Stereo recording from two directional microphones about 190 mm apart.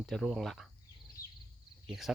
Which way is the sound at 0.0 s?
Centre (ahead or behind).